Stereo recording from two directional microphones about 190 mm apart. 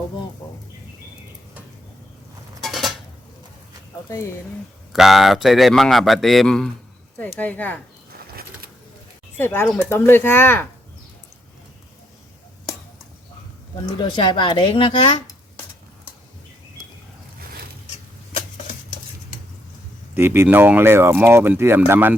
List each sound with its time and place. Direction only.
2.6 s dishes: centre (ahead or behind)
4.1 s speech: 15° left (ahead or behind)
4.9 s a man's voice: centre (ahead or behind)
9.4 s speech: 10° left (ahead or behind)
14.0 s speech: 25° left (ahead or behind)
20.1 s speech: 10° right (ahead or behind)